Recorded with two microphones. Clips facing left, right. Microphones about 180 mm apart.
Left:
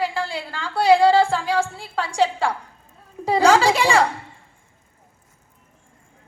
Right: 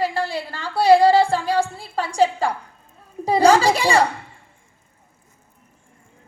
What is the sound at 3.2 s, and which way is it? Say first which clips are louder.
Speech: right 1 dB; 40° right (ahead or behind).